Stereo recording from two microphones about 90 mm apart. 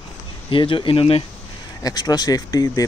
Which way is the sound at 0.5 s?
70° left (ahead or behind).